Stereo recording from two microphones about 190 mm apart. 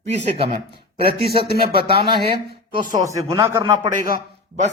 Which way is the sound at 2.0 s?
25° right (ahead or behind).